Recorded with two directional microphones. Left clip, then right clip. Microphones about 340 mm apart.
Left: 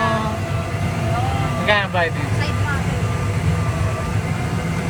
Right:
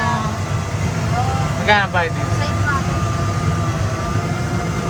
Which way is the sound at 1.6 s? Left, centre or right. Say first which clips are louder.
Right 2 dB; right.